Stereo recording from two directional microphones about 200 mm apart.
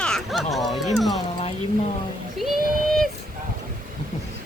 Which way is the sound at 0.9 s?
Centre (ahead or behind).